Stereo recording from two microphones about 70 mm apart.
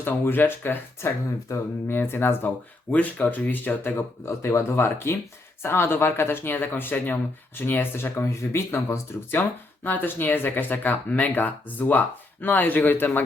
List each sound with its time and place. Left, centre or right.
0.0 s speech: left
1.5 s speech: left
1.9 s speech: left
2.9 s speech: left